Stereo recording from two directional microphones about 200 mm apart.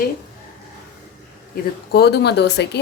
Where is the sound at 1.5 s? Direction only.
50° left (ahead or behind).